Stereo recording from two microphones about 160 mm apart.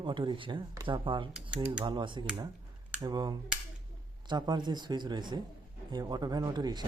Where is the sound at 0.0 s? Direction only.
30° right (ahead or behind).